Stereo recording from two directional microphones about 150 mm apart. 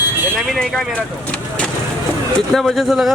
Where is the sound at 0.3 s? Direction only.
Centre (ahead or behind).